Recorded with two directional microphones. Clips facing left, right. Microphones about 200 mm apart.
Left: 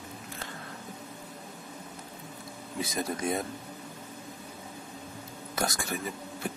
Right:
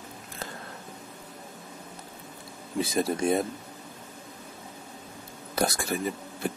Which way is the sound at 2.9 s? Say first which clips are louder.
Right 6 dB; 30° right (ahead or behind).